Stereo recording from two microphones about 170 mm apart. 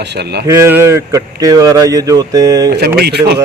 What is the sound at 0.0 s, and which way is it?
Speech, 80° right.